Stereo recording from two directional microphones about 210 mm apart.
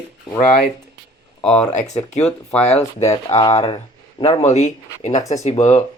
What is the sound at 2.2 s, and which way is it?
Speech, 5° left (ahead or behind).